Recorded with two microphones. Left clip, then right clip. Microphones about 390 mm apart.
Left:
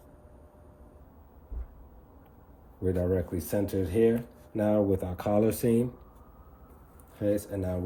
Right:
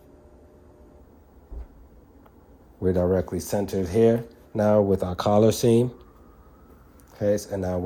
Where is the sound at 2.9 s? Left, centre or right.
Right.